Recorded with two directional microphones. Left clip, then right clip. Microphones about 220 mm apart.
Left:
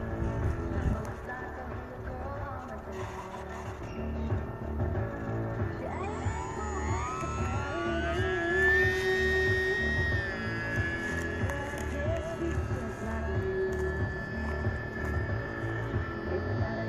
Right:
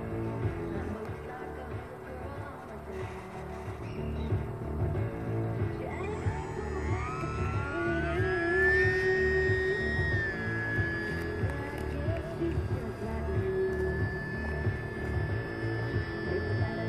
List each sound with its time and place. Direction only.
6.7 s music: 55° left (ahead or behind)